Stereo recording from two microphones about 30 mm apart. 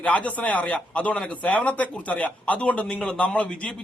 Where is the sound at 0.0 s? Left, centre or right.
Left.